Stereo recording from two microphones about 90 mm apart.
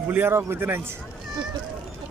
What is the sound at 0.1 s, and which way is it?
Speech, 25° right (ahead or behind).